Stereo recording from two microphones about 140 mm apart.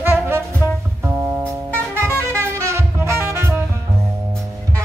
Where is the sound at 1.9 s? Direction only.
20° right (ahead or behind).